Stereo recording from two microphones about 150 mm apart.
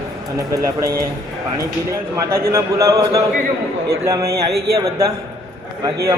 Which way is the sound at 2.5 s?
20° right (ahead or behind).